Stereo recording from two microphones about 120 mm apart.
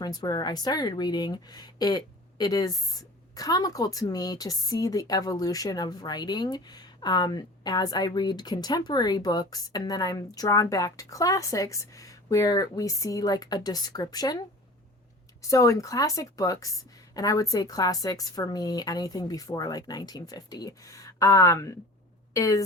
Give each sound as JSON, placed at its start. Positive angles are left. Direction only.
{"t": 0.0, "sound": "speech", "side_deg": 35}